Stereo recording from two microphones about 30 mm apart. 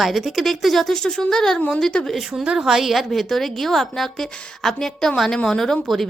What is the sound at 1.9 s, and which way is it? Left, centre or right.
Speech, left.